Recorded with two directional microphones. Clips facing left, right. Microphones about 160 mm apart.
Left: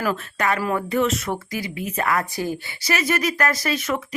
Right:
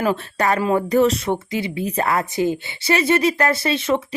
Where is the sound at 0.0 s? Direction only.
30° right (ahead or behind).